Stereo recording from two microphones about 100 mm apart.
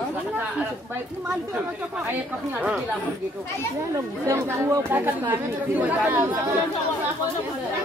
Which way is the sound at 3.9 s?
30° right (ahead or behind).